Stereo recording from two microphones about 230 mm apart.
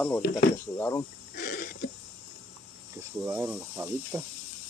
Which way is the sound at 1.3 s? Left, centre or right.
Left.